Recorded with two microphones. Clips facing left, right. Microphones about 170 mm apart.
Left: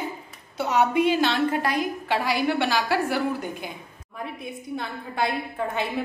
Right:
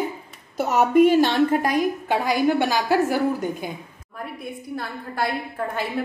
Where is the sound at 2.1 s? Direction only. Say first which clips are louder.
Right 3 dB; 15° right (ahead or behind).